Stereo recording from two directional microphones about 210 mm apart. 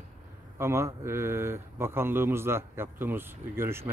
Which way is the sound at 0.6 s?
15° right (ahead or behind).